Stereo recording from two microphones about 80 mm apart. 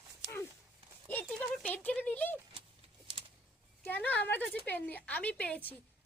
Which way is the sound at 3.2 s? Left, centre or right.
Right.